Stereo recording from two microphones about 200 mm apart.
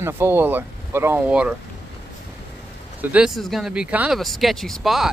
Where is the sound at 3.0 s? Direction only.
5° right (ahead or behind).